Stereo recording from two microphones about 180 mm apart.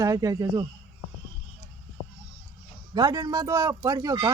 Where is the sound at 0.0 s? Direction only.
20° right (ahead or behind).